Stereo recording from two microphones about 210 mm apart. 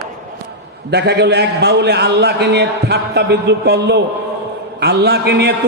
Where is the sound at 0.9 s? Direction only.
50° right (ahead or behind).